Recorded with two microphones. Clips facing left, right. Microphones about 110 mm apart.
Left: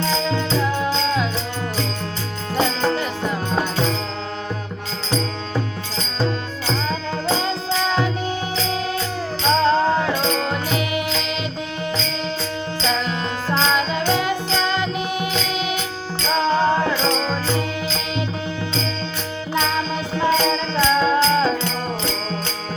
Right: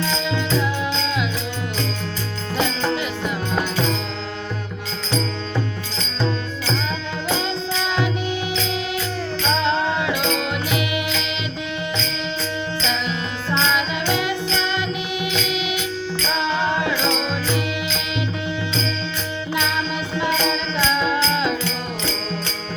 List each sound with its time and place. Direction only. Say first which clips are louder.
0.0 s music: left 2 dB; 40° left (ahead or behind)
2.6 s music: left 2 dB; 40° left (ahead or behind)
7.3 s music: left 2 dB; 30° left (ahead or behind)
9.6 s music: left 5 dB; 40° left (ahead or behind)
12.8 s music: left 5 dB; 35° left (ahead or behind)
20.1 s music: left 3 dB; 35° left (ahead or behind)